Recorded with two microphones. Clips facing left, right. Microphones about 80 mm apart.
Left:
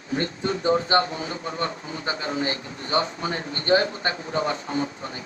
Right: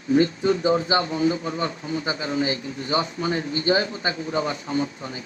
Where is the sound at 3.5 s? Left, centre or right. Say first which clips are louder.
Left 4 dB; left.